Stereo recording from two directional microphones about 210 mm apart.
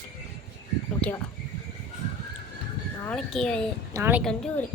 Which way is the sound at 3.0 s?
5° left (ahead or behind).